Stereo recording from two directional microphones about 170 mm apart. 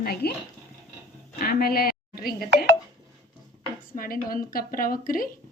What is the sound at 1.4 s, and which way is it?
Speech, 60° left (ahead or behind).